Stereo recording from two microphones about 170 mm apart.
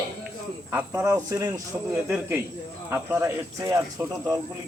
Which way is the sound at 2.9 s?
15° right (ahead or behind).